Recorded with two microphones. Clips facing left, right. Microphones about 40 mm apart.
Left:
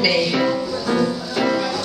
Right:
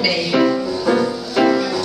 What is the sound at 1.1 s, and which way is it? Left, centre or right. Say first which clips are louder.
Music: right 4 dB; centre.